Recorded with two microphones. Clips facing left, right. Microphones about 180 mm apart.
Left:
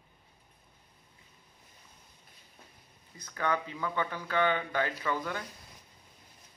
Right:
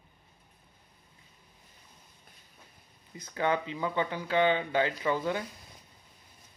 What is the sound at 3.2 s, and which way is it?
Speech, 25° right (ahead or behind).